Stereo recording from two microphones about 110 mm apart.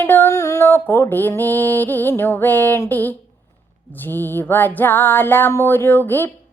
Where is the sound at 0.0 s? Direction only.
20° left (ahead or behind).